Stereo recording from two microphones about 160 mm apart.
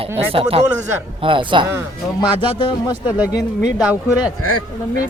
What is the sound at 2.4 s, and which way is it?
Speech, 35° left (ahead or behind).